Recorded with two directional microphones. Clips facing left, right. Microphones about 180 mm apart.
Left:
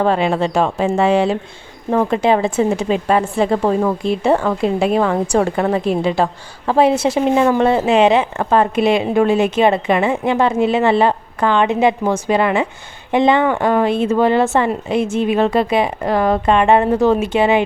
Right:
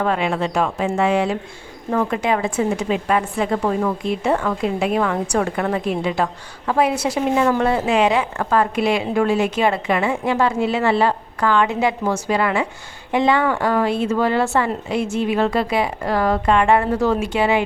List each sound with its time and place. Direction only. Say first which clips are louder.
0.0 s speech: left 4 dB; 30° left (ahead or behind)